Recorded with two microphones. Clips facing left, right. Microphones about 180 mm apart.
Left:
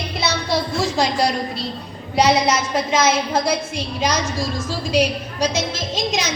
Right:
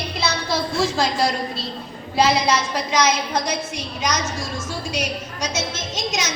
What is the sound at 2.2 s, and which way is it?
Child singing, 20° left (ahead or behind).